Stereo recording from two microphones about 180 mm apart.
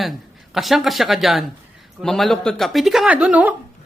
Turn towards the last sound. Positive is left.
turn(degrees=-5)  # may be behind; listen again after turning